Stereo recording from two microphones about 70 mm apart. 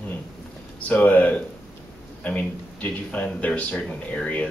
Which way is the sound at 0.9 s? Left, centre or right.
Left.